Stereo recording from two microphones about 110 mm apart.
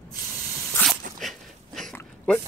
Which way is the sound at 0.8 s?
Centre (ahead or behind).